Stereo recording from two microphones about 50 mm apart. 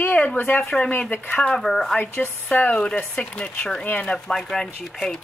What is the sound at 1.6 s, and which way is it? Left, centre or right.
Speech, centre.